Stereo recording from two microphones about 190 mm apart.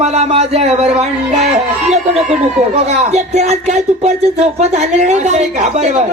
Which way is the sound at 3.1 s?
35° right (ahead or behind).